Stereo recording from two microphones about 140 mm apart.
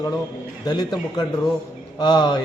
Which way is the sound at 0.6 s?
30° left (ahead or behind).